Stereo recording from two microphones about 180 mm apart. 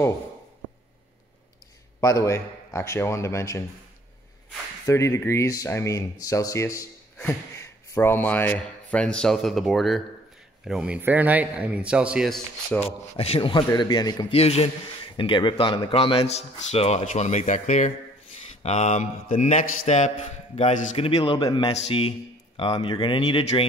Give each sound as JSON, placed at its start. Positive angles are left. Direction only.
{"t": 2.0, "sound": "speech", "side_deg": 20}
{"t": 4.8, "sound": "a man's voice", "side_deg": 15}
{"t": 13.2, "sound": "a man's voice", "side_deg": 30}
{"t": 14.4, "sound": "a man's voice", "side_deg": 35}